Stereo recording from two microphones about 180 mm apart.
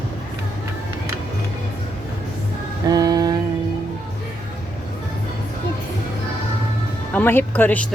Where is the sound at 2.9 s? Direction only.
20° right (ahead or behind).